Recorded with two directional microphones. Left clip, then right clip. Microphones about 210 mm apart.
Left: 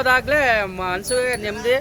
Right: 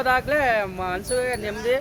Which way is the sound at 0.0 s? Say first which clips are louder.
Left 4 dB; 5° left (ahead or behind).